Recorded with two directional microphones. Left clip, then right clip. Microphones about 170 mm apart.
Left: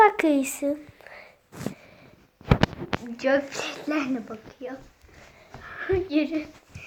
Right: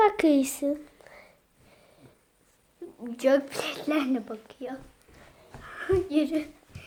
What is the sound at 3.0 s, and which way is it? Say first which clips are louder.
A woman's voice: right 1 dB; 5° right (ahead or behind).